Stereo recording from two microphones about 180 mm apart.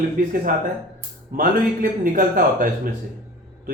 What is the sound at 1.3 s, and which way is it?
A man's voice, 50° right (ahead or behind).